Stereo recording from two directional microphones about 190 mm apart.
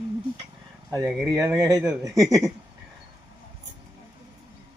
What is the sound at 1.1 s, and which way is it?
Speech, 5° right (ahead or behind).